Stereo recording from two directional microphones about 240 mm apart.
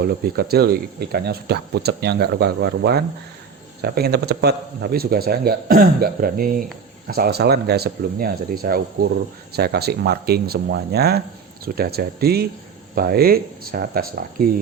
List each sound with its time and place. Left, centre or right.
0.0 s speech: right